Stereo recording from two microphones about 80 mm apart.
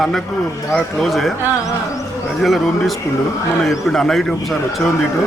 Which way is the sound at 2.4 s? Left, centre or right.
Centre.